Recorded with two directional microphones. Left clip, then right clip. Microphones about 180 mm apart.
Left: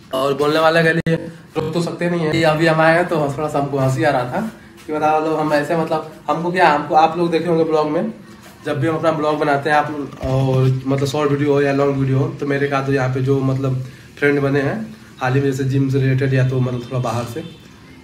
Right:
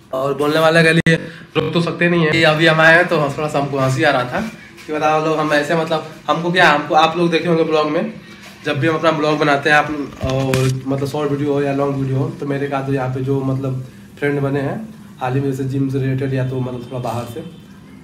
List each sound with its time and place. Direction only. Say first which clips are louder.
0.1 s speech: even; centre (ahead or behind)